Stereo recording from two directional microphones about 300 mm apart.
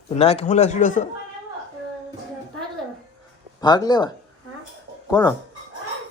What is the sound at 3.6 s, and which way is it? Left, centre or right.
Speech, centre.